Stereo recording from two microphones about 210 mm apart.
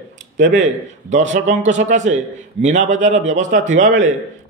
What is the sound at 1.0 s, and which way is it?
A man's voice, 35° right (ahead or behind).